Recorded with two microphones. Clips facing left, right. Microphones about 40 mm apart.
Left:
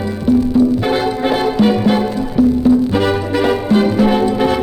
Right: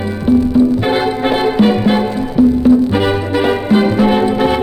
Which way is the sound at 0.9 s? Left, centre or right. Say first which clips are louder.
Right 1 dB; centre.